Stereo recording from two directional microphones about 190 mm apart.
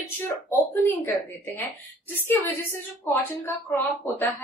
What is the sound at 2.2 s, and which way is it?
Speech, 10° left (ahead or behind).